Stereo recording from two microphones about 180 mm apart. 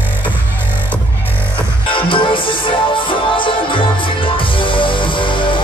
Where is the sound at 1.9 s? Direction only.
30° left (ahead or behind).